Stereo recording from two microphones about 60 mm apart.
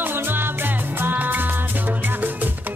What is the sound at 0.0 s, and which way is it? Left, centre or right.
Music, right.